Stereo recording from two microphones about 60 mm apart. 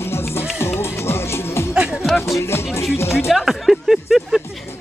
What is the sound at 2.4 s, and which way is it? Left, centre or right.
Music, left.